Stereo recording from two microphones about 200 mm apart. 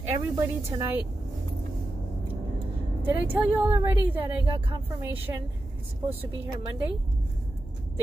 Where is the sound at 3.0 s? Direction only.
10° right (ahead or behind).